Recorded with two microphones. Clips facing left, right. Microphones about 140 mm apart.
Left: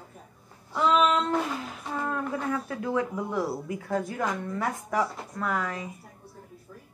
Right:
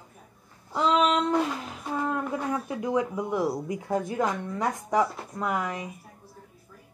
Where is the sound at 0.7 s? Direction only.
20° right (ahead or behind).